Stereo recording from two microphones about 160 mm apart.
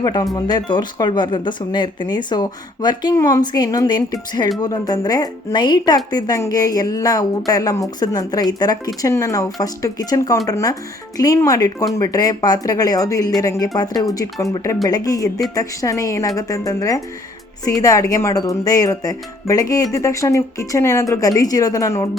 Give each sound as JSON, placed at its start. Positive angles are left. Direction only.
{"t": 0.0, "sound": "speech", "side_deg": 25}